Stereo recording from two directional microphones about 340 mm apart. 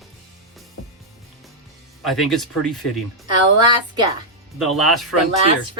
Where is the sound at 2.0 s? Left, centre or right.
Centre.